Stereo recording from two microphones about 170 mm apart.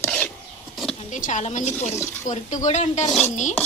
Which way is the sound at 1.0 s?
45° left (ahead or behind).